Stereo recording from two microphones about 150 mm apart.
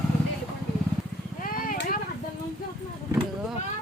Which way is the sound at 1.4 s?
65° left (ahead or behind).